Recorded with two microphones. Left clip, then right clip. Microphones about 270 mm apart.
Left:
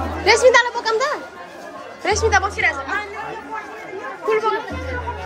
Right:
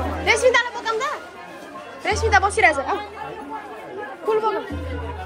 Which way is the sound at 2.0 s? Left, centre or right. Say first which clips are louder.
Left 1 dB; centre.